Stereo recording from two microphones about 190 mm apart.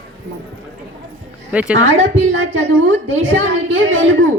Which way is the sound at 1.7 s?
80° right.